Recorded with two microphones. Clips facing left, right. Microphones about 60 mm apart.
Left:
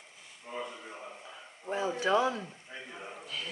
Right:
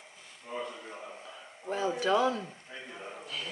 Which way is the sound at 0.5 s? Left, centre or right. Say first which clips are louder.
Right 1 dB; centre.